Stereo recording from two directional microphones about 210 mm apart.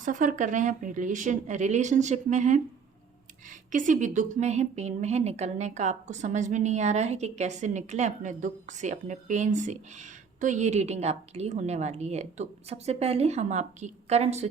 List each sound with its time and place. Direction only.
0.0 s a woman's voice: 40° right (ahead or behind)
3.7 s a woman's voice: 35° right (ahead or behind)